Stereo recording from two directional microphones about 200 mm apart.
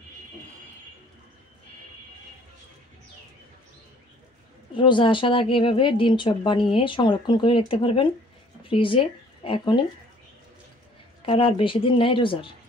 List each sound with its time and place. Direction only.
4.7 s speech: 25° left (ahead or behind)
11.2 s speech: 25° left (ahead or behind)